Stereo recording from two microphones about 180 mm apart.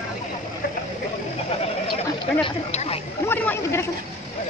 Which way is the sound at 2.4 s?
35° left (ahead or behind).